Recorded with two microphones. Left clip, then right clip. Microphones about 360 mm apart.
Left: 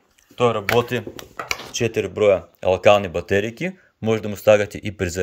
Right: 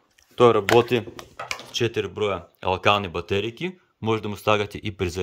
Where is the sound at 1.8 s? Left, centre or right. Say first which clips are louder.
Left 4 dB; centre.